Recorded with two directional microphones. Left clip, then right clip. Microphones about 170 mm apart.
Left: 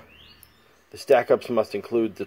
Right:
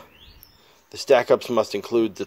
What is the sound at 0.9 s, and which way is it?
Speech, 25° right (ahead or behind).